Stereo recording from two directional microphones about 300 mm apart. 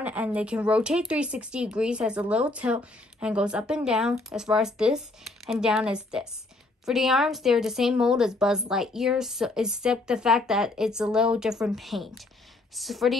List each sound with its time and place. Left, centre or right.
0.0 s speech: centre